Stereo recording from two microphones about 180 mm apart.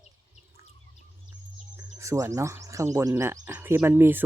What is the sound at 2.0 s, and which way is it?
Speech, 15° right (ahead or behind).